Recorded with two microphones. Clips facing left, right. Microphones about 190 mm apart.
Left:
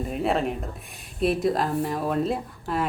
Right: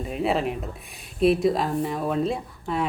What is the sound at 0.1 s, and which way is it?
Speech, centre (ahead or behind).